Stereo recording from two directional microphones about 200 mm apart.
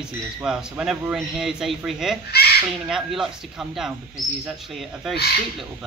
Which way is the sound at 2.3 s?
50° left (ahead or behind).